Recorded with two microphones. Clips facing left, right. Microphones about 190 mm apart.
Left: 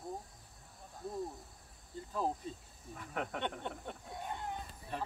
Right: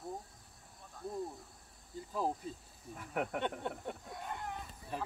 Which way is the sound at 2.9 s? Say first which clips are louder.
Right 3 dB; 10° right (ahead or behind).